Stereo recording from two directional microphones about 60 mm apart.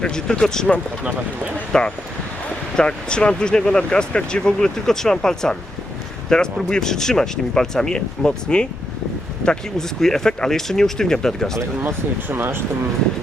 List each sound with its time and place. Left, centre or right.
0.0 s speech: centre
11.8 s speech: right